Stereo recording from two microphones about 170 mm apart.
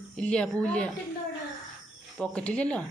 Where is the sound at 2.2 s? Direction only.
5° left (ahead or behind).